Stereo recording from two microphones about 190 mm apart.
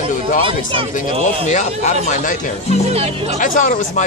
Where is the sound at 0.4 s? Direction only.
25° right (ahead or behind).